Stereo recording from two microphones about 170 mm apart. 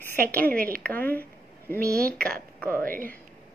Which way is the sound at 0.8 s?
10° left (ahead or behind).